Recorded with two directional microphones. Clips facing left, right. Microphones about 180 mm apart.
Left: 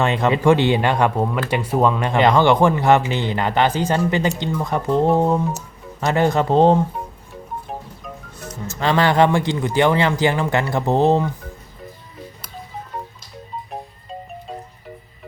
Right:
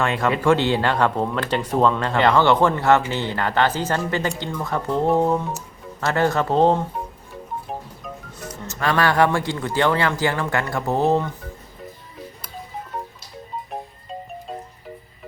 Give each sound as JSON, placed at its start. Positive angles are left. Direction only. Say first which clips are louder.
{"t": 0.0, "sound": "speech", "louder": "left 3 dB", "side_deg": 20}
{"t": 8.8, "sound": "speech", "louder": "left 3 dB", "side_deg": 20}